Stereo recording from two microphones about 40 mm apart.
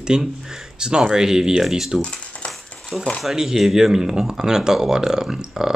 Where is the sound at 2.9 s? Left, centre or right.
Centre.